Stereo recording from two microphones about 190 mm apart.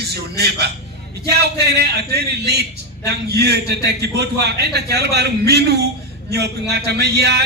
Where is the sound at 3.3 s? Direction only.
60° right (ahead or behind).